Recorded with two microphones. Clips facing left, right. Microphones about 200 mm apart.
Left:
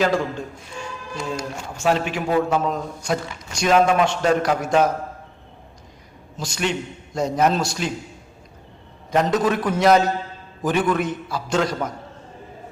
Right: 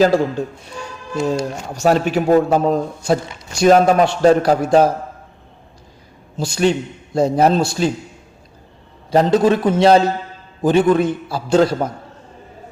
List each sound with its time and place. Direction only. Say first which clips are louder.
0.0 s a man's voice: right 7 dB; 35° right (ahead or behind)
6.4 s a man's voice: right 8 dB; 30° right (ahead or behind)
9.0 s a man's voice: right 6 dB; 30° right (ahead or behind)